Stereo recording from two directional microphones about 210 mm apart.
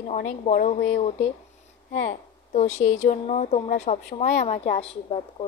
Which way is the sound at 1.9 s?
35° left (ahead or behind).